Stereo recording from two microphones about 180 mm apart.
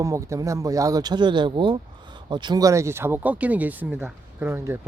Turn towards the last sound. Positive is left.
turn(degrees=-10)  # may be behind; listen again after turning